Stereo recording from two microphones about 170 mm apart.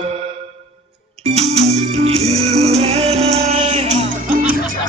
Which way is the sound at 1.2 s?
40° right (ahead or behind).